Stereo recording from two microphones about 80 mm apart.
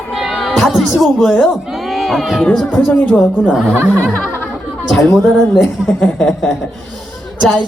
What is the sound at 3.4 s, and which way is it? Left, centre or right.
Speech, centre.